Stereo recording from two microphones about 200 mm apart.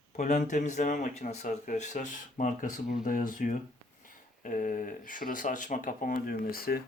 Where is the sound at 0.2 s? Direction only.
40° left (ahead or behind).